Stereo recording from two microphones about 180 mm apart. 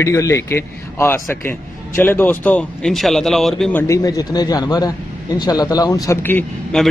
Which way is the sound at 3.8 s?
15° left (ahead or behind).